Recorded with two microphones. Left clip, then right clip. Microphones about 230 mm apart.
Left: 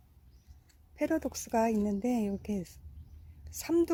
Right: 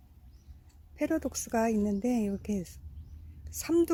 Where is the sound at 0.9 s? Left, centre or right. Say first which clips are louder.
Right 1 dB; centre.